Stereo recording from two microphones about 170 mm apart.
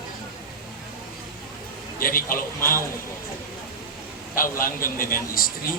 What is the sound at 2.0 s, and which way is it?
Speech, 55° left (ahead or behind).